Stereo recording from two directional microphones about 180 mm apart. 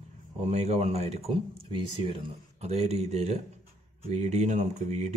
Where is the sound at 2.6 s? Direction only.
35° right (ahead or behind).